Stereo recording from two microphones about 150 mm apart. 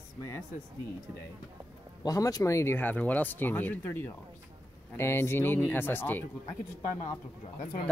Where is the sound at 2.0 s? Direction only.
25° left (ahead or behind).